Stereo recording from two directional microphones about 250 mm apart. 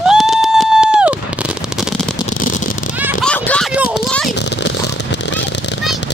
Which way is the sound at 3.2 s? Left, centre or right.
Centre.